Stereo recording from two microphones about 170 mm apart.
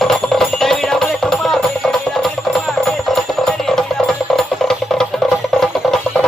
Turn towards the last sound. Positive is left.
turn(degrees=5)  # may be behind; listen again after turning